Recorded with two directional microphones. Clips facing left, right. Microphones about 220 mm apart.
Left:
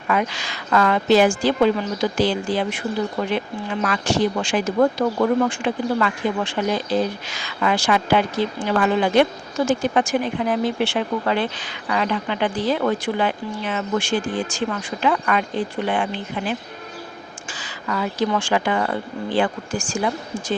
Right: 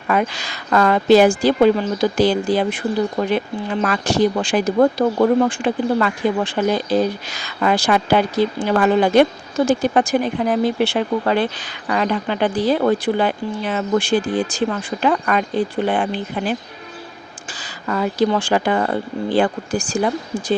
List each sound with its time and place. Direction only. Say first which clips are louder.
0.1 s speech: right 3 dB; 40° right (ahead or behind)
17.5 s speech: right 3 dB; 35° right (ahead or behind)